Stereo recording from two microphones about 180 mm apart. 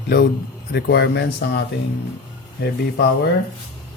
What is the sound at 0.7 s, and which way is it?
Speech, 70° left (ahead or behind).